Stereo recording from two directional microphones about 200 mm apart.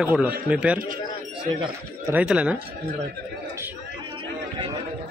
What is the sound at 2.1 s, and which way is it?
Speech, 5° right (ahead or behind).